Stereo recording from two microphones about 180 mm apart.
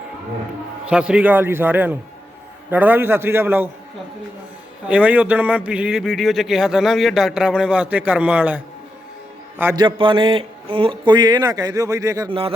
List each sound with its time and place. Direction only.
0.9 s a man's voice: 5° right (ahead or behind)
4.9 s a man's voice: 5° right (ahead or behind)
9.7 s speech: 25° right (ahead or behind)